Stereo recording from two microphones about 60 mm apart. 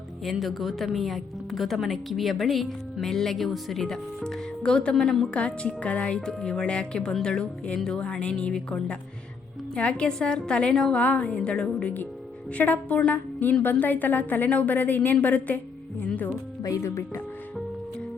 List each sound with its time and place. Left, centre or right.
0.3 s a woman's voice: centre
11.0 s a woman's voice: left
16.6 s speech: left